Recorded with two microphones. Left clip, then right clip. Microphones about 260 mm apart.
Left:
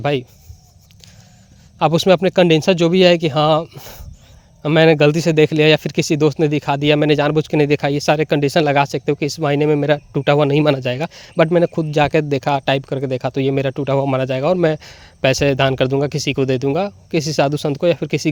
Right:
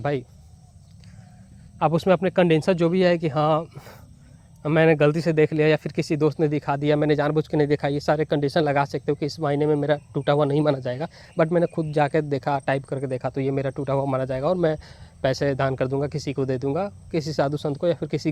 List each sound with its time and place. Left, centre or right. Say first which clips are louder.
1.8 s speech: left 7 dB; left